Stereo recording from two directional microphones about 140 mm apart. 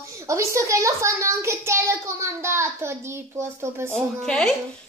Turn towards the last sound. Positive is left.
turn(degrees=5)  # may be behind; listen again after turning